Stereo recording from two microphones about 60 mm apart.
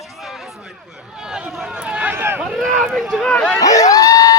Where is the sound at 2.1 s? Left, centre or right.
Right.